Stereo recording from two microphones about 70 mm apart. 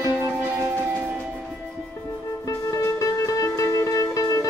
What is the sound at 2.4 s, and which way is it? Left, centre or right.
Music, left.